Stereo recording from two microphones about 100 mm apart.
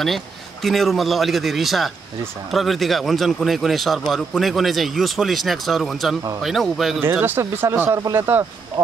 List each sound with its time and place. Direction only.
0.0 s speech: centre (ahead or behind)
7.0 s speech: 20° right (ahead or behind)